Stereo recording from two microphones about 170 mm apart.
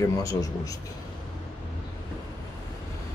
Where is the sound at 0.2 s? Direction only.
20° left (ahead or behind).